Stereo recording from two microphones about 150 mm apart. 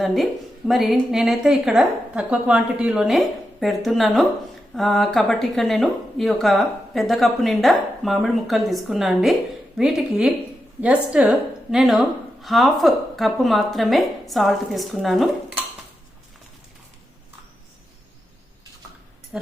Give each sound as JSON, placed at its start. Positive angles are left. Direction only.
{"t": 0.0, "sound": "speech", "side_deg": 0}
{"t": 19.3, "sound": "speech", "side_deg": -5}